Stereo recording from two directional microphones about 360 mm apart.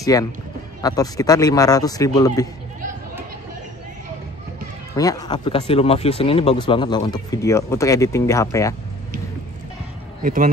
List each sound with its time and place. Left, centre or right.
0.0 s speech: centre
4.9 s speech: centre
10.2 s speech: right